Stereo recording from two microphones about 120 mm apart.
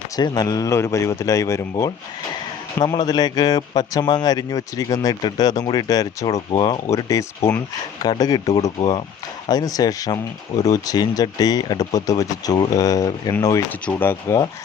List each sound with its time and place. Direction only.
0.2 s a man's voice: 35° left (ahead or behind)
13.7 s speech: 15° left (ahead or behind)